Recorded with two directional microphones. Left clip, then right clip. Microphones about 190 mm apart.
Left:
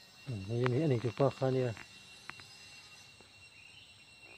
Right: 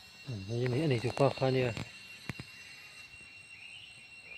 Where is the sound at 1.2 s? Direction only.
15° right (ahead or behind).